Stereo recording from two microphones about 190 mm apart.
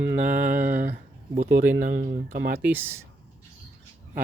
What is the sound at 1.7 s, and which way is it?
Speech, 40° right (ahead or behind).